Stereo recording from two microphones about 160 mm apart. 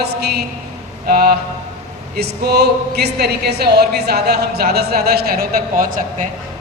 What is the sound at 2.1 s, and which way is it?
A woman's voice, 90° right.